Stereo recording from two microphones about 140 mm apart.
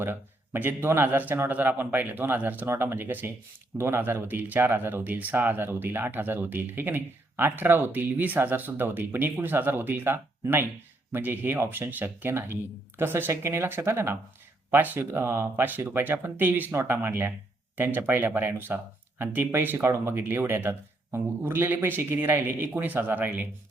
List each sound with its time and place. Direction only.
0.0 s speech: 15° right (ahead or behind)